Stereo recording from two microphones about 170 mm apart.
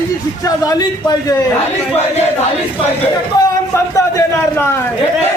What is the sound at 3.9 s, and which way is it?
Speech, 15° left (ahead or behind).